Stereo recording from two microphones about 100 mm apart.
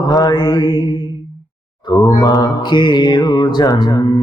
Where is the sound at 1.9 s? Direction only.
40° left (ahead or behind).